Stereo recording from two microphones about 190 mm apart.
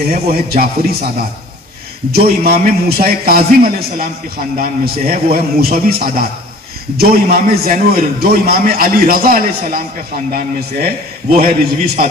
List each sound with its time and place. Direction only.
0.0 s a man's voice: 50° right (ahead or behind)
2.1 s a man's voice: 55° right (ahead or behind)
11.3 s a man's voice: 50° right (ahead or behind)